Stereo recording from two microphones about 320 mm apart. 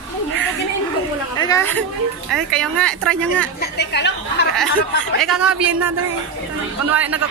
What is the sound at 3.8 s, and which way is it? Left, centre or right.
Speech, left.